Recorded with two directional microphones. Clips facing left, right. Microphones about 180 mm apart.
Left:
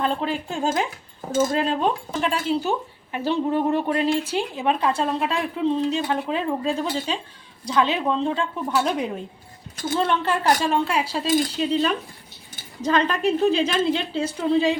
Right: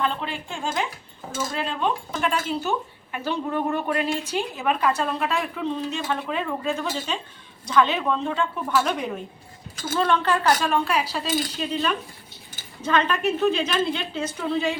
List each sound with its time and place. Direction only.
0.0 s a woman's voice: 40° left (ahead or behind)
9.9 s a woman's voice: 25° left (ahead or behind)